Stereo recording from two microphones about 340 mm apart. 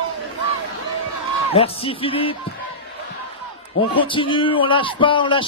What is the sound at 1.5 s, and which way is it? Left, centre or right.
Speech, centre.